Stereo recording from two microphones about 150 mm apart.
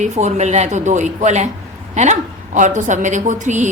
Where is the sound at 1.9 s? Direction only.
50° right (ahead or behind).